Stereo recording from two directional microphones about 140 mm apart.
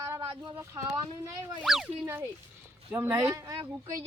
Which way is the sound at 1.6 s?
5° right (ahead or behind).